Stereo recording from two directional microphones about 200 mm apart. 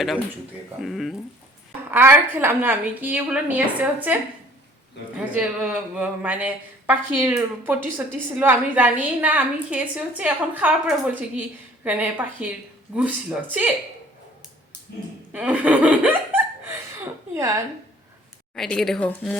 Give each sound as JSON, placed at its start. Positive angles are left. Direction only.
{"t": 0.8, "sound": "a woman's voice", "side_deg": 0}
{"t": 1.9, "sound": "a woman's voice", "side_deg": -10}
{"t": 15.3, "sound": "laughter", "side_deg": -5}
{"t": 18.5, "sound": "a woman's voice", "side_deg": 0}